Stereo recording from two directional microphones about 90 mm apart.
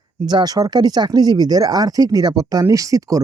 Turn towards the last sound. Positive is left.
turn(degrees=-40)  # may be behind; listen again after turning